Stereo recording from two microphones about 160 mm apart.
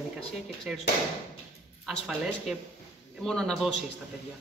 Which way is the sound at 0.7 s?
5° right (ahead or behind).